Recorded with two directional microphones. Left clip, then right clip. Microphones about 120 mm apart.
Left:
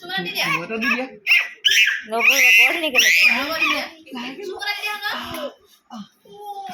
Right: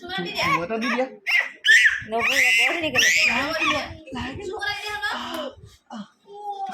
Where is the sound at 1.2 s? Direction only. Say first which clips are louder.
Left 4 dB; 25° right (ahead or behind).